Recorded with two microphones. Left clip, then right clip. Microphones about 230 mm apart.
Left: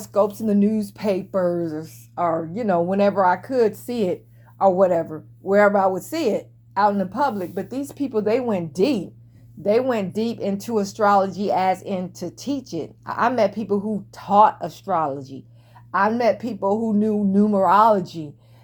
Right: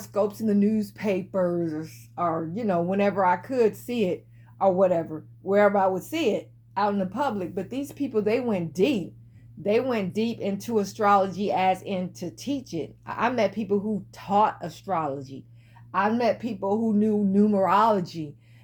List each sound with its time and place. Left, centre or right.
0.0 s speech: left